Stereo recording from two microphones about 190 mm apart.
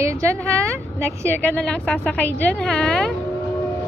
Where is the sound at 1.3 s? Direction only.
10° left (ahead or behind).